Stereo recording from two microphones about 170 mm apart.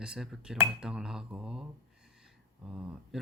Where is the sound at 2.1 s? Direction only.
5° right (ahead or behind).